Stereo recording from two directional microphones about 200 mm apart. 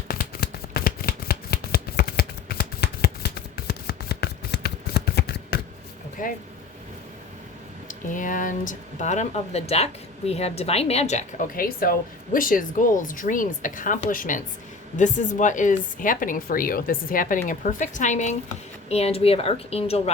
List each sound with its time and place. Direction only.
0.1 s shuffling cards: 50° left (ahead or behind)
6.2 s speech: 45° left (ahead or behind)
7.9 s speech: 40° left (ahead or behind)